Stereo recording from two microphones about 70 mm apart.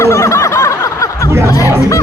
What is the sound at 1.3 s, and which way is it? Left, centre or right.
Speech, right.